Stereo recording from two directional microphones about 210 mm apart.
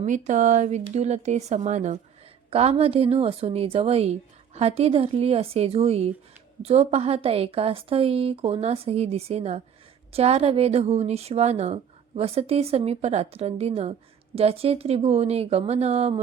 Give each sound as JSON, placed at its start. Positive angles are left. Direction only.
{"t": 0.0, "sound": "a woman's voice", "side_deg": -35}